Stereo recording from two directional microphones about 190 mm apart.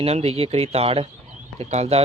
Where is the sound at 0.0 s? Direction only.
30° right (ahead or behind).